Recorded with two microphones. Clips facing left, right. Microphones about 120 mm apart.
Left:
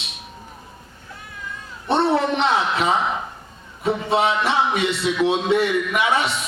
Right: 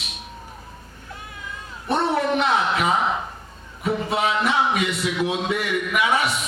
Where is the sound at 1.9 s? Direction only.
30° left (ahead or behind).